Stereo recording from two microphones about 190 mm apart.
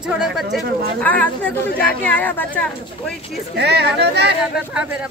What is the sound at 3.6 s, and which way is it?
Speech, 60° right (ahead or behind).